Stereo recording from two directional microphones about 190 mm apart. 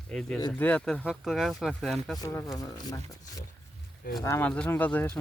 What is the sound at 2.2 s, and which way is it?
Speech, 10° left (ahead or behind).